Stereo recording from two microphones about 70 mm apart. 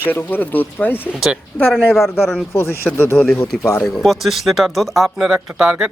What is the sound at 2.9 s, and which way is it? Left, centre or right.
Speech, left.